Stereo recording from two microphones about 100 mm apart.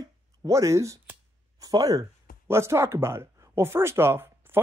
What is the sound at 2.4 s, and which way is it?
Speech, 25° right (ahead or behind).